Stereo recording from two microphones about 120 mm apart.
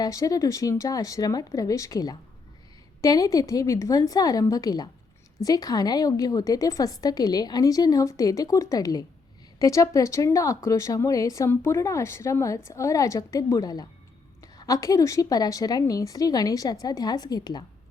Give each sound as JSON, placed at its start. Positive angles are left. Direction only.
{"t": 0.0, "sound": "a woman's voice", "side_deg": 30}